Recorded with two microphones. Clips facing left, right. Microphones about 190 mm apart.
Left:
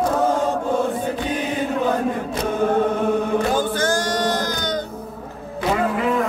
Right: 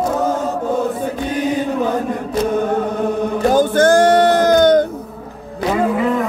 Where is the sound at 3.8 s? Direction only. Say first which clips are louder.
Right 10 dB; 55° right (ahead or behind).